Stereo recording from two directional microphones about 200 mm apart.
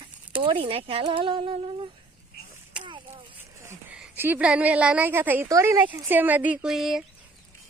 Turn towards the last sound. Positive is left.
turn(degrees=0)  # may be behind; listen again after turning